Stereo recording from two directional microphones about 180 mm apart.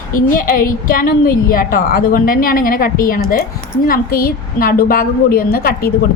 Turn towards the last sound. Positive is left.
turn(degrees=55)  # may be behind; listen again after turning